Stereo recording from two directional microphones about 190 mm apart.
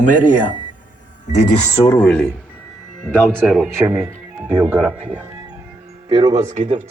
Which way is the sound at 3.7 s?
10° right (ahead or behind).